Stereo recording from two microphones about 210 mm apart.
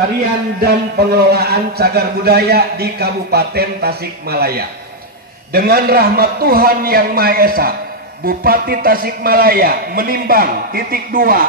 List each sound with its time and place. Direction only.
0.6 s a man's voice: 50° right (ahead or behind)